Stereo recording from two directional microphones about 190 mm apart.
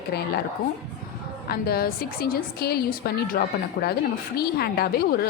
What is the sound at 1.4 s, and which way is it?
A woman's voice, 55° left (ahead or behind).